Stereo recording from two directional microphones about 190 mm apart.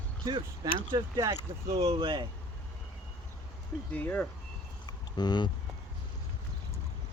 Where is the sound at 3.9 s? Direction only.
10° left (ahead or behind).